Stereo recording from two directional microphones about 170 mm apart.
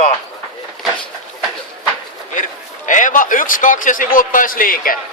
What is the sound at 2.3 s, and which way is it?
A man's voice, 50° left (ahead or behind).